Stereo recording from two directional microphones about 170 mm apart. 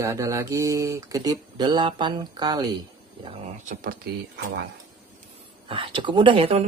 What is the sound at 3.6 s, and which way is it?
Speech, 55° right (ahead or behind).